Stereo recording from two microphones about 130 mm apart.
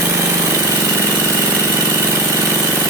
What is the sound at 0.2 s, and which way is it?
Engine, 25° right (ahead or behind).